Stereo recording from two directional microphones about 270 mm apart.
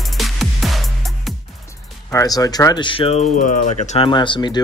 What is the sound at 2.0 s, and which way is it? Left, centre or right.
Speech, centre.